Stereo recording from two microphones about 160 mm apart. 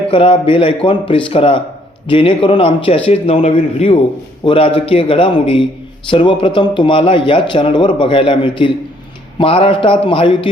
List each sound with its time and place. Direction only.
0.1 s a man's voice: 35° left (ahead or behind)